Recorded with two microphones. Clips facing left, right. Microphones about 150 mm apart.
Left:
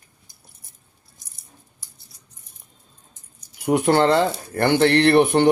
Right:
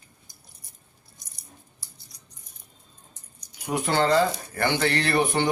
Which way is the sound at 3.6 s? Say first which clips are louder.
Left 6 dB; 60° left (ahead or behind).